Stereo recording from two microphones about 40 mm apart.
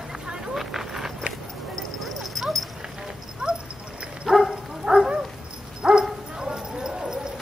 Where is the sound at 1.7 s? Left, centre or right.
Centre.